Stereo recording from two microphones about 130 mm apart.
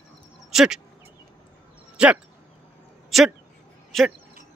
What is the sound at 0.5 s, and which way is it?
Speech, 5° right (ahead or behind).